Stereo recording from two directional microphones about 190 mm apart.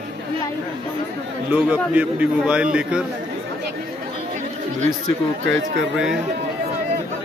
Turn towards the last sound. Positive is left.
turn(degrees=0)  # may be behind; listen again after turning